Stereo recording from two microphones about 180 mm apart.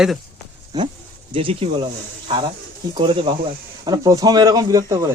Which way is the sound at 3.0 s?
30° right (ahead or behind).